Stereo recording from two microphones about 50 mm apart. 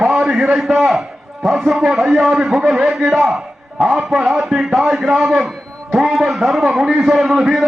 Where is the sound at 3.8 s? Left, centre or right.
Centre.